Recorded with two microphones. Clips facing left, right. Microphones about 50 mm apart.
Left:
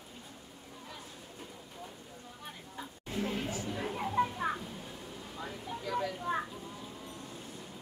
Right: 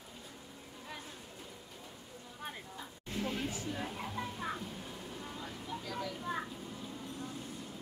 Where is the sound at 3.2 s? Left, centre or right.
Centre.